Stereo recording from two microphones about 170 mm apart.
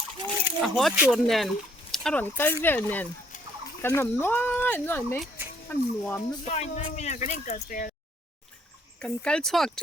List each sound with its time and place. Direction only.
0.6 s speech: centre (ahead or behind)
6.4 s speech: 40° left (ahead or behind)
9.0 s speech: 5° left (ahead or behind)